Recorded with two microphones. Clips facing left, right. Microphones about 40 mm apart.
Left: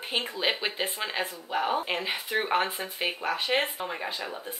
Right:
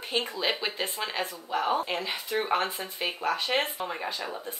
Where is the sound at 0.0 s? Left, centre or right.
Left.